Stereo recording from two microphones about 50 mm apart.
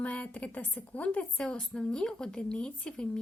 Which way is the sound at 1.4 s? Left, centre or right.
Centre.